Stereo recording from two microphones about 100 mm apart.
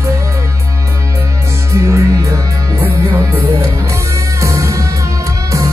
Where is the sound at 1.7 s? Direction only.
30° right (ahead or behind).